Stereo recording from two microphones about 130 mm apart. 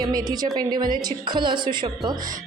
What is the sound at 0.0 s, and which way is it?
A woman's voice, 30° right (ahead or behind).